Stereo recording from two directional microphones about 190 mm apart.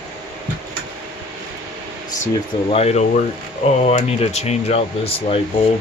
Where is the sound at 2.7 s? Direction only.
35° left (ahead or behind).